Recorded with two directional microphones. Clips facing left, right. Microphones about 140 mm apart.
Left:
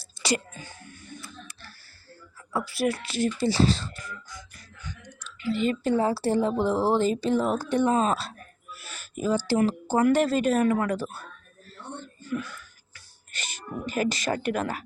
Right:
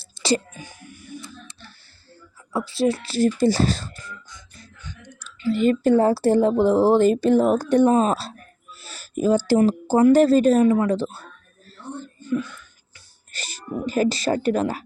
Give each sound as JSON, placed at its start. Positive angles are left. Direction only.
{"t": 0.0, "sound": "a sound", "side_deg": -30}
{"t": 0.5, "sound": "music", "side_deg": -15}
{"t": 1.2, "sound": "a sound", "side_deg": -20}
{"t": 2.6, "sound": "speech", "side_deg": -25}
{"t": 4.0, "sound": "music", "side_deg": -25}
{"t": 5.2, "sound": "speech", "side_deg": -40}
{"t": 8.7, "sound": "a sound", "side_deg": -30}
{"t": 9.1, "sound": "speech", "side_deg": -45}
{"t": 9.6, "sound": "speech", "side_deg": -35}
{"t": 12.2, "sound": "whispering", "side_deg": -20}
{"t": 13.3, "sound": "speech", "side_deg": -35}